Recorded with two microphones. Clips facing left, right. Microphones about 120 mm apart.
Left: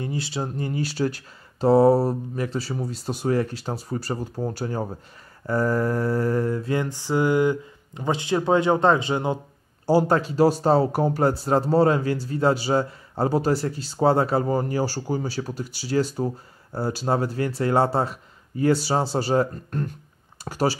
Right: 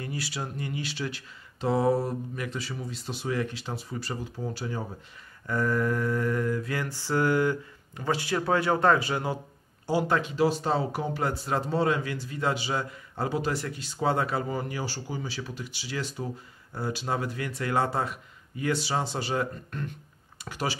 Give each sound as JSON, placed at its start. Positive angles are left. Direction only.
{"t": 0.0, "sound": "speech", "side_deg": 25}
{"t": 5.5, "sound": "mantra", "side_deg": 35}
{"t": 9.8, "sound": "speech", "side_deg": 35}